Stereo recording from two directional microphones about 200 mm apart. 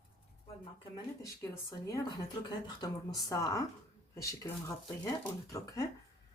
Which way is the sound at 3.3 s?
15° left (ahead or behind).